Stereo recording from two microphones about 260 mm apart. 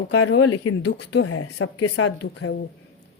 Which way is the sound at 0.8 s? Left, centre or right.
Left.